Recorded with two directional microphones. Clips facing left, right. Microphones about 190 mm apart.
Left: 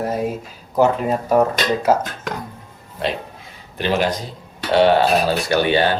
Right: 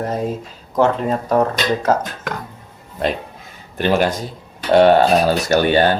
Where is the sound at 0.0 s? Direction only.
10° left (ahead or behind).